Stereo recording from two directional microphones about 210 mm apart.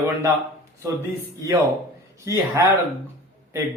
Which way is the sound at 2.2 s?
15° right (ahead or behind).